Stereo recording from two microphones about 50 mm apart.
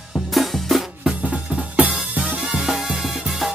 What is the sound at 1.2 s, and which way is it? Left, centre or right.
Music, right.